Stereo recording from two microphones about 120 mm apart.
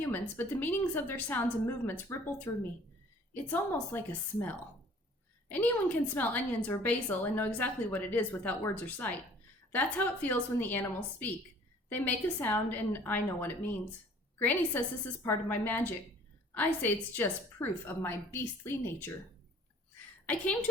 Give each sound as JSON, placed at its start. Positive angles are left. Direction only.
{"t": 0.0, "sound": "a woman's voice", "side_deg": 15}
{"t": 20.2, "sound": "a woman's voice", "side_deg": 15}